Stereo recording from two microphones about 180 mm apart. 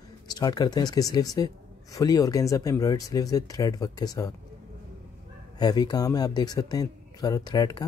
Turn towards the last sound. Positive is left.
turn(degrees=20)  # may be behind; listen again after turning